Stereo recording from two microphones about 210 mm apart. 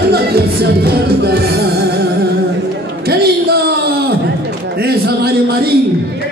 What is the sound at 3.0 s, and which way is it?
Music, 50° right (ahead or behind).